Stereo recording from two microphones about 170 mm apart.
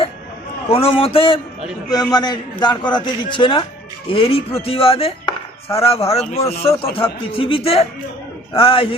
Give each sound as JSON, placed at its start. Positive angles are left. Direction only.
{"t": 0.7, "sound": "chopping", "side_deg": 35}
{"t": 1.9, "sound": "a man's voice", "side_deg": 25}
{"t": 4.1, "sound": "chopping", "side_deg": 35}